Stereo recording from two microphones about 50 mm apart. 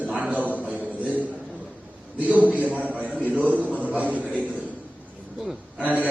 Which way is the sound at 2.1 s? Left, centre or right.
Right.